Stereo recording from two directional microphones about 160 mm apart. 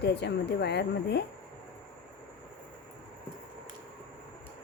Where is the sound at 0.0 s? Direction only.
90° left.